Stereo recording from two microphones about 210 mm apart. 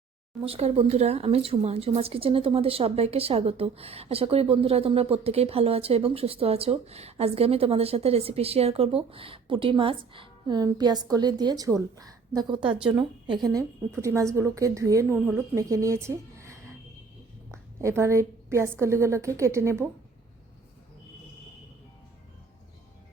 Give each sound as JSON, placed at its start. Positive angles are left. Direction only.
{"t": 0.4, "sound": "a woman's voice", "side_deg": -30}